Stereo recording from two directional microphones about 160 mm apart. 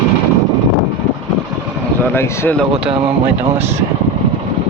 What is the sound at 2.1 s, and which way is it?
Speech, 15° left (ahead or behind).